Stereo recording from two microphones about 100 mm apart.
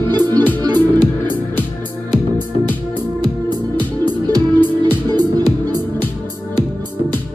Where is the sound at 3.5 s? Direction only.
45° right (ahead or behind).